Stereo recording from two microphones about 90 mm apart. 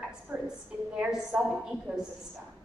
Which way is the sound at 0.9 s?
15° right (ahead or behind).